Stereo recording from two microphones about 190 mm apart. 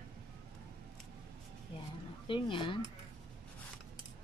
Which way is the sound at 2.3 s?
25° left (ahead or behind).